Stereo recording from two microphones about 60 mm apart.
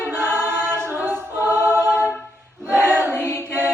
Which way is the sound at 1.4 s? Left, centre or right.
Right.